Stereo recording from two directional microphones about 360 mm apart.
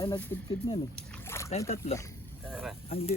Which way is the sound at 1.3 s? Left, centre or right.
Centre.